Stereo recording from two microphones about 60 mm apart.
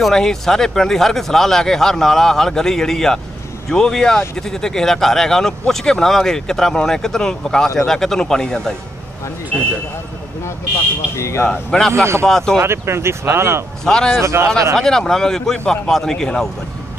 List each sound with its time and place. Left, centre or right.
0.0 s speech: centre
11.1 s speech: left
11.7 s speech: centre
12.5 s speech: right
13.8 s speech: centre
14.2 s speech: right
14.8 s speech: centre